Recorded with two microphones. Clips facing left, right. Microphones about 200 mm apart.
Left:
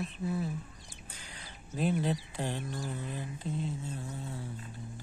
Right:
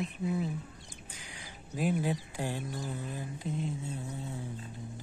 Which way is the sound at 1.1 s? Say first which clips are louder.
Even; 10° right (ahead or behind).